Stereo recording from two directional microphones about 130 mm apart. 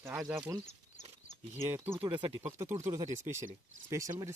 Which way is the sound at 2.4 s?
15° right (ahead or behind).